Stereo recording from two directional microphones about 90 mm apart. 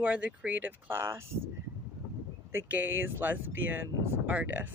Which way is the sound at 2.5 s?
20° right (ahead or behind).